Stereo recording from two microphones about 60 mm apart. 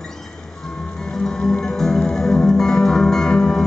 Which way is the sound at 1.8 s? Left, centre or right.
Centre.